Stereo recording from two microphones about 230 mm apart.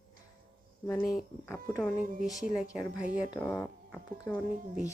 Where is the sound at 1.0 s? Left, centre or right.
Left.